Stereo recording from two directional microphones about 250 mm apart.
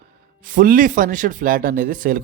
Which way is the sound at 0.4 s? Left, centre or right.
Right.